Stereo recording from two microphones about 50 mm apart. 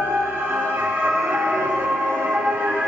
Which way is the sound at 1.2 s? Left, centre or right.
Right.